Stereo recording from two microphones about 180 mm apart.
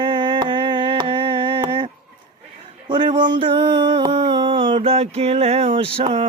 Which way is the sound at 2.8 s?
25° right (ahead or behind).